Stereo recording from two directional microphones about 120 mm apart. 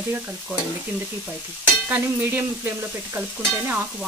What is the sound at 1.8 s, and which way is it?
Speech, 15° right (ahead or behind).